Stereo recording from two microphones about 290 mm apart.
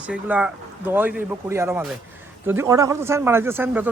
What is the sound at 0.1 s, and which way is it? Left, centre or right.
A man's voice, centre.